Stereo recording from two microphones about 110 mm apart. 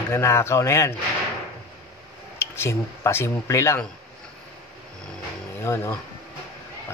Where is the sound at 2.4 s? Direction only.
20° left (ahead or behind).